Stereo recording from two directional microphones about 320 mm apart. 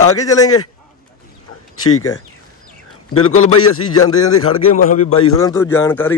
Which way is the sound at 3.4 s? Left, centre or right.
Left.